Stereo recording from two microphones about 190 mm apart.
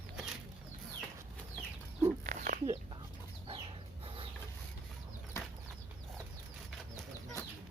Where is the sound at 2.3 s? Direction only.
45° right (ahead or behind).